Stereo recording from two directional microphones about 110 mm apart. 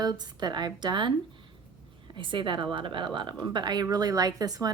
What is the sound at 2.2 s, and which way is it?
A woman's voice, 50° right (ahead or behind).